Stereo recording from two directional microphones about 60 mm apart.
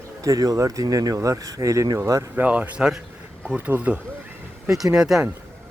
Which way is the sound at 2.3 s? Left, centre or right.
Right.